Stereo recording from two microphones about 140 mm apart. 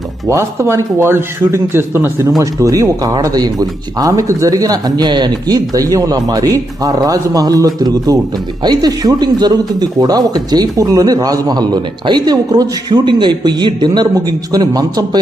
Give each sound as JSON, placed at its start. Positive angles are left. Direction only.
{"t": 0.3, "sound": "speech", "side_deg": -20}